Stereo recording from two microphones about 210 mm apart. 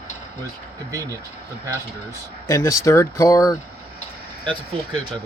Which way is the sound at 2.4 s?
15° left (ahead or behind).